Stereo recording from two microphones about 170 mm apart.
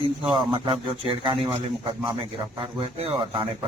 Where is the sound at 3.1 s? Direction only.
25° right (ahead or behind).